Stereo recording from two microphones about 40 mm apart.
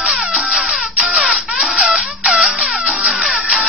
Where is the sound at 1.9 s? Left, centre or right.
Centre.